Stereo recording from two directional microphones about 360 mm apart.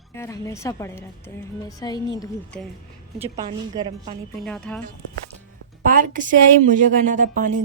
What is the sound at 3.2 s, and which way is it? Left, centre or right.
Speech, centre.